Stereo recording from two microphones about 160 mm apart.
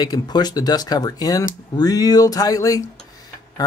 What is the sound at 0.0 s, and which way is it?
Speech, 25° left (ahead or behind).